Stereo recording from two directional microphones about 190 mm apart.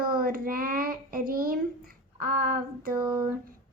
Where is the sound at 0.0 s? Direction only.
50° right (ahead or behind).